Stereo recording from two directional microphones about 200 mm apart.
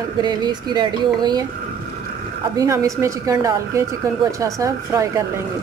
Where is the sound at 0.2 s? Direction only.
20° right (ahead or behind).